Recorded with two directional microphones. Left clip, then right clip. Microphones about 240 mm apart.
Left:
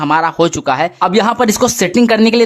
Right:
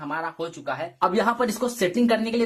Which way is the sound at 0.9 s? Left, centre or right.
Left.